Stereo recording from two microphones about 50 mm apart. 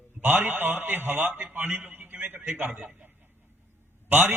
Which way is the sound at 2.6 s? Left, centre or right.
Centre.